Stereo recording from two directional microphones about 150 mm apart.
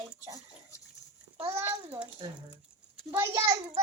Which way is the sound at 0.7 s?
20° left (ahead or behind).